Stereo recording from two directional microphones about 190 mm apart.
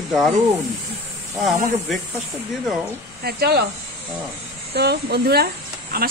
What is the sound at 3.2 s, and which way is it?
Speech, 60° right (ahead or behind).